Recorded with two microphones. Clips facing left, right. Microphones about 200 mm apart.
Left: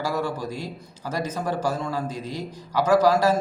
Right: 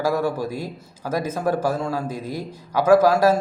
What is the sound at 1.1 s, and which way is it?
A man's voice, 10° right (ahead or behind).